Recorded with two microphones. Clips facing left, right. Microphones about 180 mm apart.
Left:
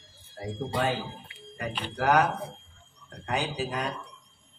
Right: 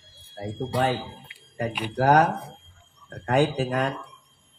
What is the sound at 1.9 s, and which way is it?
Speech, 40° right (ahead or behind).